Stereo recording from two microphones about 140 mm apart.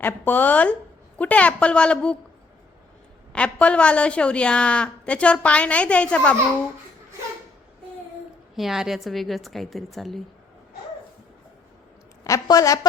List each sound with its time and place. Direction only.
0.0 s a woman's voice: 15° left (ahead or behind)
3.3 s a woman's voice: 10° left (ahead or behind)
8.5 s a woman's voice: centre (ahead or behind)
12.2 s a woman's voice: 25° left (ahead or behind)